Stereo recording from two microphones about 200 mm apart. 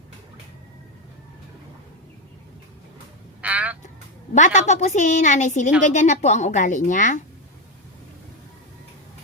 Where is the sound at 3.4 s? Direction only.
5° right (ahead or behind).